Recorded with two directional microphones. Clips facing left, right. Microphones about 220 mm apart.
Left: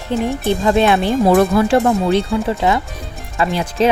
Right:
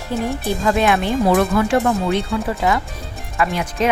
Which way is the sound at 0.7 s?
30° left (ahead or behind).